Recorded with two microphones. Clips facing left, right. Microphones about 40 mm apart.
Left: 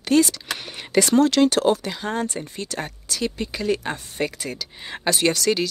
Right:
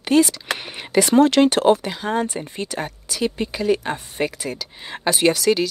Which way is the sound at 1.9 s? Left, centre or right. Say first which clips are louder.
Right 3 dB; centre.